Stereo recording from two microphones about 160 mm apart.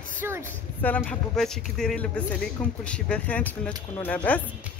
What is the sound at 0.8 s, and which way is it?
A man's voice, 10° left (ahead or behind).